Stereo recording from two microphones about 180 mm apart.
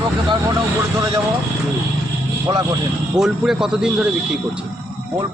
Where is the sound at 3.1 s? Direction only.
Centre (ahead or behind).